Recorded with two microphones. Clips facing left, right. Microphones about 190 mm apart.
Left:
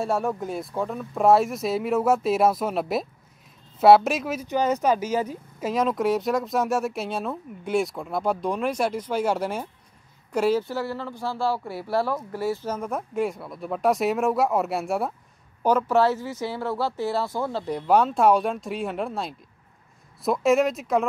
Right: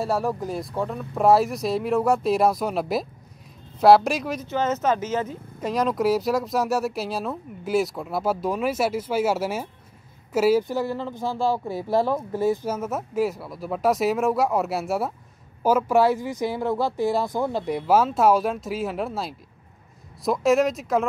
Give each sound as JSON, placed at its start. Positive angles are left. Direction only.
{"t": 0.0, "sound": "speech", "side_deg": 0}
{"t": 4.5, "sound": "speech", "side_deg": 15}
{"t": 12.7, "sound": "speech", "side_deg": -5}